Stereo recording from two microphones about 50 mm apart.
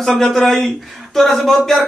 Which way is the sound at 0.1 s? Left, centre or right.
Centre.